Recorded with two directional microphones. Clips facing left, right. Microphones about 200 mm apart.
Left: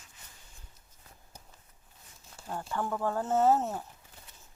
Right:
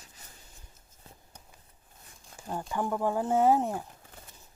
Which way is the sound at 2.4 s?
15° right (ahead or behind).